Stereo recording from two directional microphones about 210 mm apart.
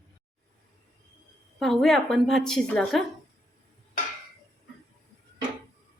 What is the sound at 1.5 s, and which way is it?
A woman's voice, centre (ahead or behind).